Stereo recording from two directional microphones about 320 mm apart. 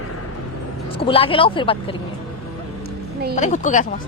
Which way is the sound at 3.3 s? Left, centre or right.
Left.